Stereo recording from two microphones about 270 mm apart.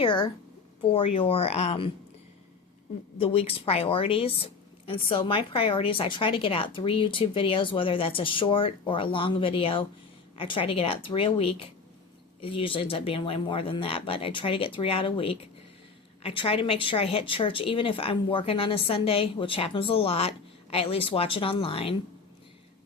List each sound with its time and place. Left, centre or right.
0.0 s speech: centre
3.2 s speech: left